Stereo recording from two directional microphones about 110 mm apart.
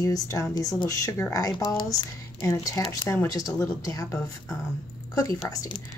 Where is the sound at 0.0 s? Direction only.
30° left (ahead or behind).